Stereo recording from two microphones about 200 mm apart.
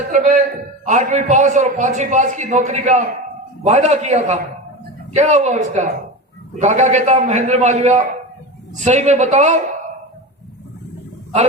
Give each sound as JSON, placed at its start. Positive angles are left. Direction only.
{"t": 0.1, "sound": "a man's voice", "side_deg": -40}